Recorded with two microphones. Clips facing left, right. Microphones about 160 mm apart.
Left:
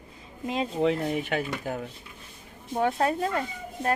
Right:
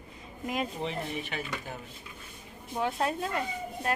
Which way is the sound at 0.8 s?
60° left (ahead or behind).